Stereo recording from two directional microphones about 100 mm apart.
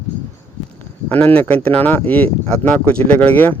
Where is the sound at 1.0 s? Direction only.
15° left (ahead or behind).